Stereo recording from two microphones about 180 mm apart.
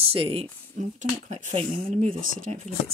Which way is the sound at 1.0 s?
40° right (ahead or behind).